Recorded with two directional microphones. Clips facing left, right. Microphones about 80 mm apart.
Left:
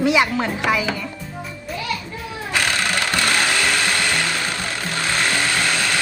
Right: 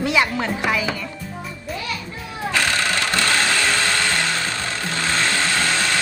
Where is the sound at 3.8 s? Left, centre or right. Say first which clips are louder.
Even; centre.